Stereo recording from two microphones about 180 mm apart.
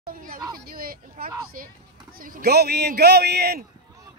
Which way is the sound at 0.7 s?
55° right (ahead or behind).